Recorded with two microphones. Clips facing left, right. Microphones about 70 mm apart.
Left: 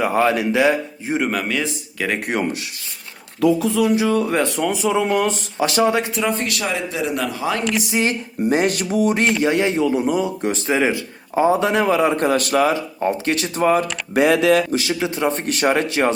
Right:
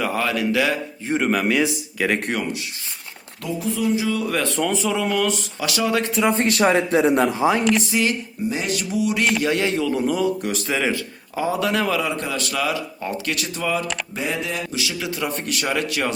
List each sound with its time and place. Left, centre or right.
0.0 s a man's voice: left
1.0 s speech: centre
3.8 s music: left
4.3 s a man's voice: left
6.2 s speech: right
7.6 s speech: centre
7.9 s a man's voice: left
8.4 s music: left
9.4 s a man's voice: left
12.0 s speech: left
14.1 s music: left
14.7 s speech: left